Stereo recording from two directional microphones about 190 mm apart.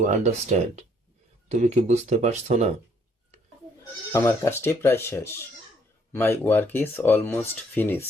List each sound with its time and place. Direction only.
0.0 s speech: 40° right (ahead or behind)
4.1 s speech: 15° left (ahead or behind)